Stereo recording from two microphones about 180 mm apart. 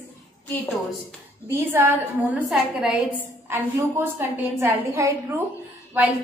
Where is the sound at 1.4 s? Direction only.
10° right (ahead or behind).